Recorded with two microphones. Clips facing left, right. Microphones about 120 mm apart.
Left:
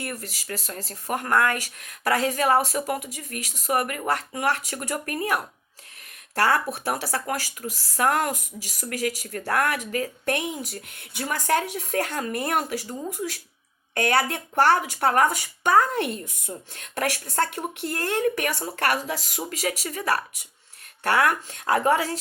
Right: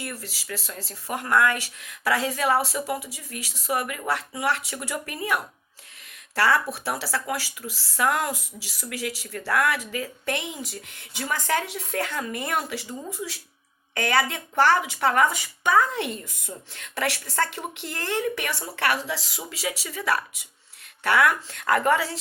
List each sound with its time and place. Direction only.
0.0 s speech: 50° left (ahead or behind)
12.9 s speech: 15° left (ahead or behind)
13.1 s speech: 50° left (ahead or behind)
21.6 s speech: 20° left (ahead or behind)
21.9 s speech: 50° left (ahead or behind)